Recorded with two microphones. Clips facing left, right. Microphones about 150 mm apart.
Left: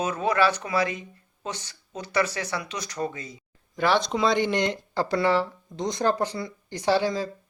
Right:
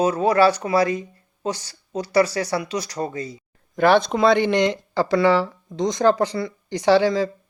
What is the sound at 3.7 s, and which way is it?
Speech, 55° right (ahead or behind).